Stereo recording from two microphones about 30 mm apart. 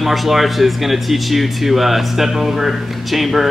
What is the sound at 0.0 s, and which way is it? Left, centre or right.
A man's voice, centre.